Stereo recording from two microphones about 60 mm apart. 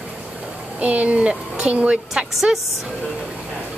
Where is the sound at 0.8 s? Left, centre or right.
Right.